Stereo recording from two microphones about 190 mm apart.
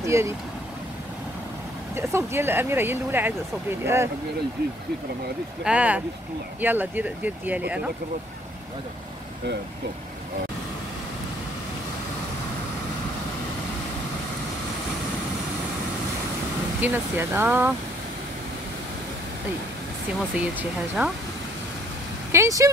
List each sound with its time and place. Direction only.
0.0 s speech: 15° right (ahead or behind)
2.0 s speech: 10° right (ahead or behind)
5.6 s speech: 5° right (ahead or behind)
16.8 s speech: 10° right (ahead or behind)
20.3 s speech: 5° right (ahead or behind)
22.3 s speech: 15° right (ahead or behind)